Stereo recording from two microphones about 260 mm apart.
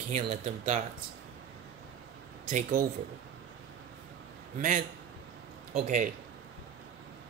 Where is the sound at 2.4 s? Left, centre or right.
Right.